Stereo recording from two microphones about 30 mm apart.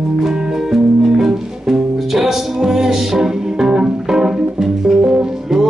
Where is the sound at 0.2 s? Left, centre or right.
Centre.